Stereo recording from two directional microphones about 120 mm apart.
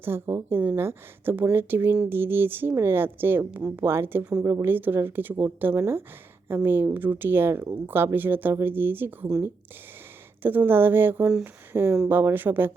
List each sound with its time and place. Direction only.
0.0 s a woman's voice: 20° right (ahead or behind)
4.4 s speech: 20° right (ahead or behind)
10.4 s speech: 15° right (ahead or behind)